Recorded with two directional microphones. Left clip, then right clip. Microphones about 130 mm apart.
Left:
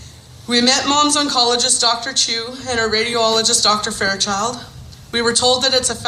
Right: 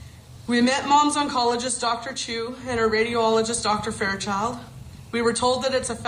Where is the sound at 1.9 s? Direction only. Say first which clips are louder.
Left 12 dB; 15° right (ahead or behind).